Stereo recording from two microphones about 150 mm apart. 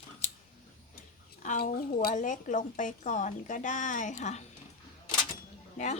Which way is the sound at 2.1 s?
55° left (ahead or behind).